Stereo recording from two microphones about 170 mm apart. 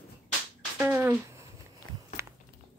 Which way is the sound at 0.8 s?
10° right (ahead or behind).